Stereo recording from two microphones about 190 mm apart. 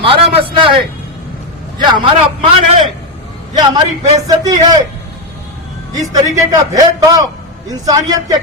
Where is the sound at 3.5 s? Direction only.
20° right (ahead or behind).